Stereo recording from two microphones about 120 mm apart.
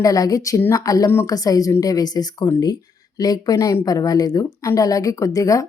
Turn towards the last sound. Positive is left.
turn(degrees=30)  # may be behind; listen again after turning